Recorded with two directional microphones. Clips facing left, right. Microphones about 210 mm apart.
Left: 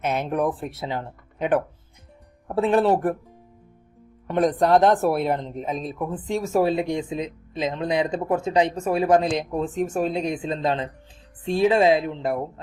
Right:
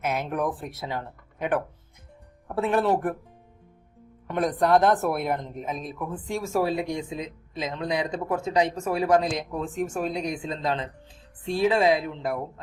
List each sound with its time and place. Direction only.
0.0 s speech: 25° left (ahead or behind)
4.3 s speech: 30° left (ahead or behind)